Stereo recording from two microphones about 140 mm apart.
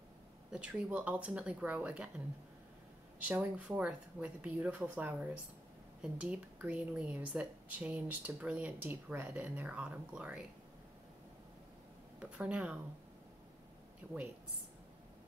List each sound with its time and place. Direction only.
0.5 s speech: 5° right (ahead or behind)
12.2 s speech: 10° right (ahead or behind)
14.0 s speech: 15° right (ahead or behind)